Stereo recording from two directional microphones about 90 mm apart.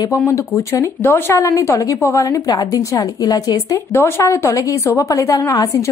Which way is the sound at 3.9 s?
30° left (ahead or behind).